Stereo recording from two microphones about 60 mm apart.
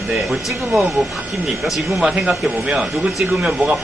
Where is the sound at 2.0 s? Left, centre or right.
Centre.